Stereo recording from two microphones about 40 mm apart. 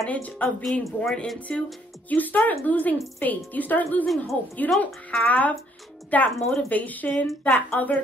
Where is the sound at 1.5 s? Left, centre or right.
Left.